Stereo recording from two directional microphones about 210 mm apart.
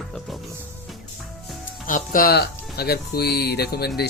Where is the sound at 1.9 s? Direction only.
40° left (ahead or behind).